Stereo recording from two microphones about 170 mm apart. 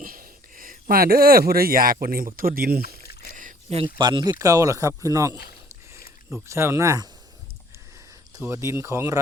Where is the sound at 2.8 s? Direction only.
70° left (ahead or behind).